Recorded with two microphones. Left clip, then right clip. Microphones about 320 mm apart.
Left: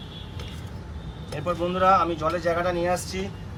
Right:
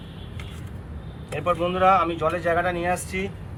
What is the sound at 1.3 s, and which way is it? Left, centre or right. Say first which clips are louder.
Speech: right 3 dB; centre.